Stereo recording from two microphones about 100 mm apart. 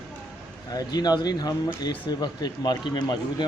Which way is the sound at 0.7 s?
40° left (ahead or behind).